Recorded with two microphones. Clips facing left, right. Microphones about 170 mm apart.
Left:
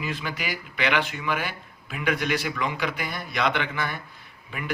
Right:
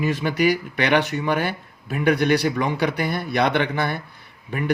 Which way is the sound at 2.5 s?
55° right (ahead or behind).